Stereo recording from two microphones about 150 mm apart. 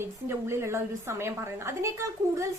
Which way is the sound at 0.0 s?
15° right (ahead or behind).